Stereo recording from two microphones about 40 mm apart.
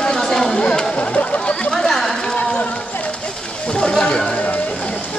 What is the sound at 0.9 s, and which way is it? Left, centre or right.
Speech, left.